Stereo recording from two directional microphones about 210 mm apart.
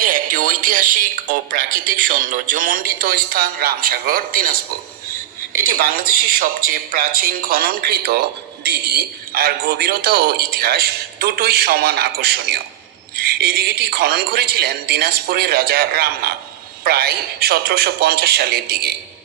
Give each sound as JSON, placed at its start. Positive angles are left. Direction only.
{"t": 0.0, "sound": "speech", "side_deg": -40}
{"t": 5.6, "sound": "a man's voice", "side_deg": -45}